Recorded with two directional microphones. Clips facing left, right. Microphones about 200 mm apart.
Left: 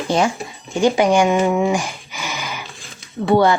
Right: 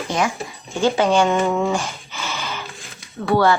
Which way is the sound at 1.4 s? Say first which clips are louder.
Left 3 dB; 15° left (ahead or behind).